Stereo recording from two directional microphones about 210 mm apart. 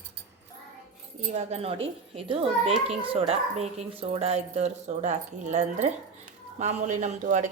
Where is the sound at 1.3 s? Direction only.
30° right (ahead or behind).